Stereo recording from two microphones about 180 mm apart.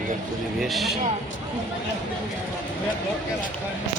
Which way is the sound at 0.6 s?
Centre (ahead or behind).